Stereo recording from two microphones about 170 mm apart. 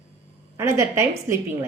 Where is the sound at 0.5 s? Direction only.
15° right (ahead or behind).